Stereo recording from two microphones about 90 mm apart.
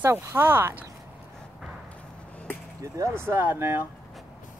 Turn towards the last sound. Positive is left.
turn(degrees=-25)  # may be behind; listen again after turning